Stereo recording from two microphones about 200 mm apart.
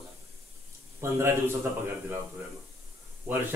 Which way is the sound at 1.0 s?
15° right (ahead or behind).